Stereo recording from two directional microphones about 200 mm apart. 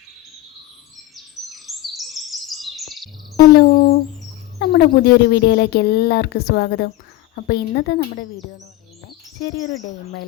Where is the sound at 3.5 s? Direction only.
45° left (ahead or behind).